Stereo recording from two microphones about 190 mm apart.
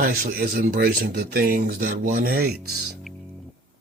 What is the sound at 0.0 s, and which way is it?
Speech, 50° right (ahead or behind).